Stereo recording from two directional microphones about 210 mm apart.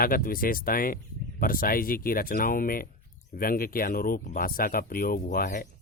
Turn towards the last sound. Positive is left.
turn(degrees=40)  # may be behind; listen again after turning